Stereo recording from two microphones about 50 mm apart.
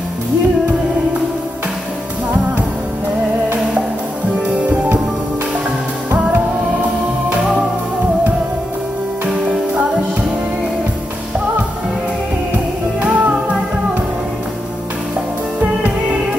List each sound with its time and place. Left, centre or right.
13.0 s music: right